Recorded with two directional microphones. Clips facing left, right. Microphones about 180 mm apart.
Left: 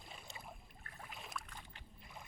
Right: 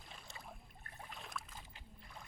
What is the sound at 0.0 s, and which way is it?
Boat, 10° left (ahead or behind).